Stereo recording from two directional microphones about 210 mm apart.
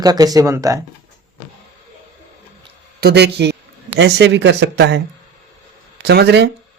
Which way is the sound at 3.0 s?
50° right (ahead or behind).